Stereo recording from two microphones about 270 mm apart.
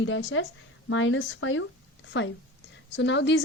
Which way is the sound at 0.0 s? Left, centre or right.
Left.